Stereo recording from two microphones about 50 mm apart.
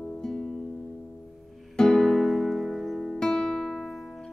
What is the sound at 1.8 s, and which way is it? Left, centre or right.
Music, centre.